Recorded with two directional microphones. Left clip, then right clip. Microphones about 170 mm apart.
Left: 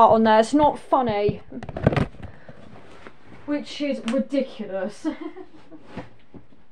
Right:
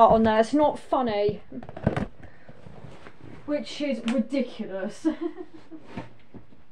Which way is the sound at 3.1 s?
60° left (ahead or behind).